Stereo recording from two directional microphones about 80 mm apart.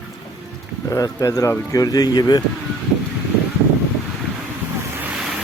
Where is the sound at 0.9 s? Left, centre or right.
Left.